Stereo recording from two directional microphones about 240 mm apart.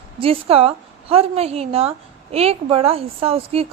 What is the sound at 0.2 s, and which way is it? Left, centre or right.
A woman's voice, right.